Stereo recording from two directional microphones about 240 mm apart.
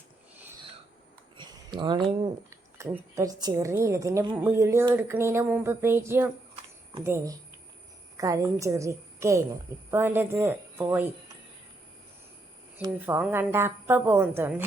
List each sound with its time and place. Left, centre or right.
1.4 s a sound: centre
2.5 s a woman's voice: centre
12.7 s a woman's voice: centre